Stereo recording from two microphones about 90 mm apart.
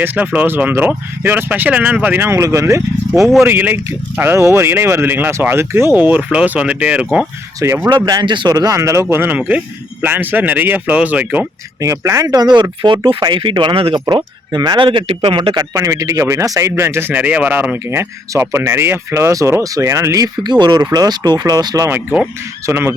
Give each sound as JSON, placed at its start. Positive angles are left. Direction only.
{"t": 0.0, "sound": "speech", "side_deg": -20}
{"t": 3.2, "sound": "speech", "side_deg": 0}
{"t": 3.4, "sound": "speech", "side_deg": -25}
{"t": 7.9, "sound": "speech", "side_deg": -55}
{"t": 11.8, "sound": "speech", "side_deg": -35}
{"t": 14.1, "sound": "speech", "side_deg": -50}
{"t": 14.8, "sound": "speech", "side_deg": -80}
{"t": 15.5, "sound": "speech", "side_deg": -40}
{"t": 22.6, "sound": "speech", "side_deg": -25}